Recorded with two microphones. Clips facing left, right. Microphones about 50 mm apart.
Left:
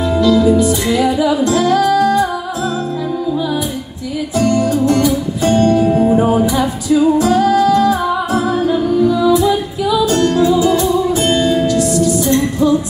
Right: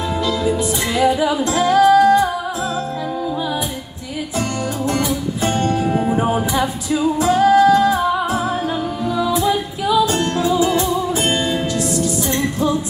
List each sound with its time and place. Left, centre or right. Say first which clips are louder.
0.2 s music: left 9 dB; right
4.4 s music: left 9 dB; right
6.4 s music: left 4 dB; right
10.2 s music: left 5 dB; centre